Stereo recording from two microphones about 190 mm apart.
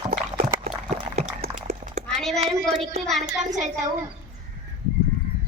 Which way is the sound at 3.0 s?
Centre (ahead or behind).